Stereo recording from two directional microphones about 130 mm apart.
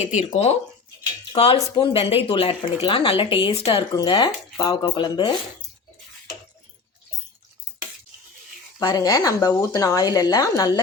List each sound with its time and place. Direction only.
0.0 s speech: 60° left (ahead or behind)
3.9 s speech: 35° left (ahead or behind)
8.8 s speech: 30° left (ahead or behind)